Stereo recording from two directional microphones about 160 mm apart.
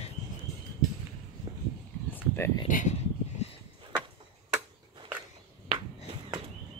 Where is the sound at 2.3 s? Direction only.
15° left (ahead or behind).